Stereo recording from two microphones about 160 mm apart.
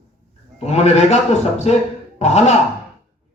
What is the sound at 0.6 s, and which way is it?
Speech, 40° left (ahead or behind).